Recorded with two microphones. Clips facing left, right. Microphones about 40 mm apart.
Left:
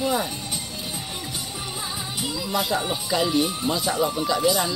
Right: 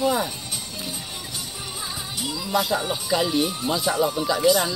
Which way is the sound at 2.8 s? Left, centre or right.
Centre.